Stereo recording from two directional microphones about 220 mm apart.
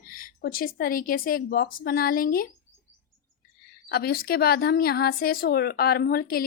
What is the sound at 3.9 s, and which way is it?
A woman's voice, 45° left (ahead or behind).